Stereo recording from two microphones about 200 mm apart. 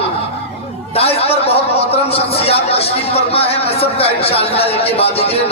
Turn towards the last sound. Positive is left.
turn(degrees=30)  # may be behind; listen again after turning